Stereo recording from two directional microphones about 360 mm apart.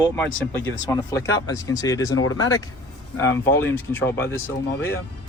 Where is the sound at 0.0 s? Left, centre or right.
Centre.